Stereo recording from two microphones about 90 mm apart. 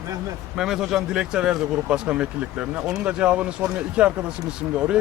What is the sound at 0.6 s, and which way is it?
Speech, 5° right (ahead or behind).